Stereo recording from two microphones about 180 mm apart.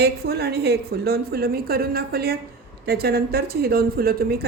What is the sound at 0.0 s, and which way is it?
A woman's voice, 65° right (ahead or behind).